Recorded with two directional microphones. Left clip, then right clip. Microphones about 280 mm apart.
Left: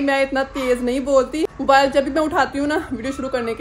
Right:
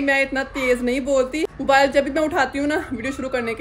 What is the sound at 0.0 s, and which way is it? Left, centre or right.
Speech, centre.